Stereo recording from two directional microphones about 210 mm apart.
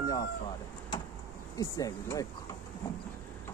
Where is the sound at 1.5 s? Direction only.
15° left (ahead or behind).